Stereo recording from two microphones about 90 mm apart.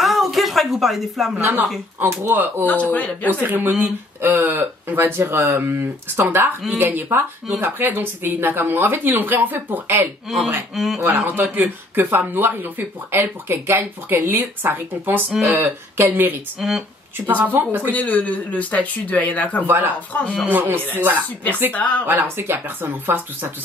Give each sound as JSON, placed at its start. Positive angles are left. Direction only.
{"t": 0.0, "sound": "a sound", "side_deg": 0}
{"t": 2.0, "sound": "speech", "side_deg": -25}
{"t": 2.6, "sound": "speech", "side_deg": 15}
{"t": 3.3, "sound": "speech", "side_deg": -20}
{"t": 10.3, "sound": "speech", "side_deg": 0}
{"t": 11.0, "sound": "speech", "side_deg": -30}
{"t": 16.5, "sound": "speech", "side_deg": 0}
{"t": 17.3, "sound": "speech", "side_deg": -20}
{"t": 17.9, "sound": "speech", "side_deg": 15}
{"t": 19.6, "sound": "speech", "side_deg": -20}
{"t": 20.1, "sound": "speech", "side_deg": 15}
{"t": 20.5, "sound": "speech", "side_deg": -20}
{"t": 21.7, "sound": "speech", "side_deg": 15}
{"t": 22.0, "sound": "speech", "side_deg": -25}